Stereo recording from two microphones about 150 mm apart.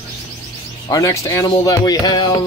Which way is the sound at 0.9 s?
20° left (ahead or behind).